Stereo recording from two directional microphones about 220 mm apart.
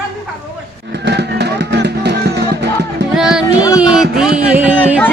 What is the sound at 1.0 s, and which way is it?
Music, 50° right (ahead or behind).